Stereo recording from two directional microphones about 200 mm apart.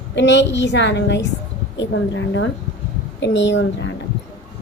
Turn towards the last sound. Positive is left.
turn(degrees=65)  # may be behind; listen again after turning